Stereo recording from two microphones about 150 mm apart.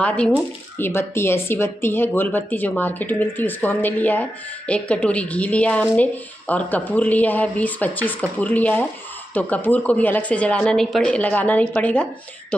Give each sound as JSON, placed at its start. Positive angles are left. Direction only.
{"t": 0.0, "sound": "speech", "side_deg": 10}